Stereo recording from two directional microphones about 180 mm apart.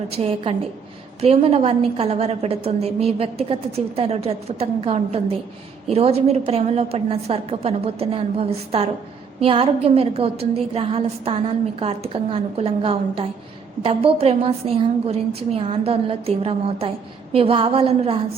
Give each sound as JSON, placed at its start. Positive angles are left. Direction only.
{"t": 0.1, "sound": "a woman's voice", "side_deg": -35}